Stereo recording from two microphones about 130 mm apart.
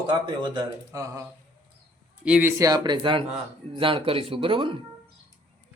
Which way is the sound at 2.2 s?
10° right (ahead or behind).